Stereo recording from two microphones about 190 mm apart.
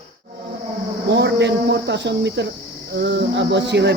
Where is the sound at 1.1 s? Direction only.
65° right (ahead or behind).